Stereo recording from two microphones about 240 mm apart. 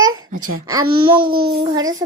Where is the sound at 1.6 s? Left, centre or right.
Centre.